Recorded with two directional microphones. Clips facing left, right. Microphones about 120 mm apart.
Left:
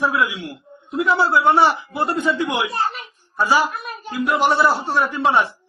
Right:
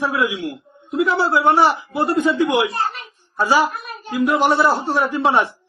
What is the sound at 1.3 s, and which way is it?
A man's voice, 10° right (ahead or behind).